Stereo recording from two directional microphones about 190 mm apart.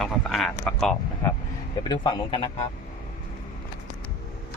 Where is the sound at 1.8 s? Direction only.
20° left (ahead or behind).